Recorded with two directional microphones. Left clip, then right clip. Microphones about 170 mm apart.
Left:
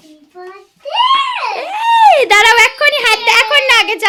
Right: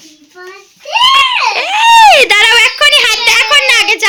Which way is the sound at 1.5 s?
10° left (ahead or behind).